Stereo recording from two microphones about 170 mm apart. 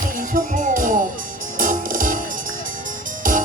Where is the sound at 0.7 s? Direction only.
50° right (ahead or behind).